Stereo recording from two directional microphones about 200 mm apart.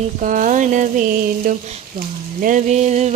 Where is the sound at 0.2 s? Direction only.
40° right (ahead or behind).